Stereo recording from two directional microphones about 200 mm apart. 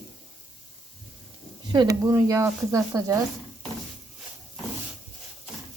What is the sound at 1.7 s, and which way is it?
Speech, 20° right (ahead or behind).